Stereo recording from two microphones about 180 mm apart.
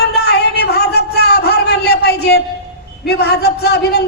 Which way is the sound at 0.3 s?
65° left (ahead or behind).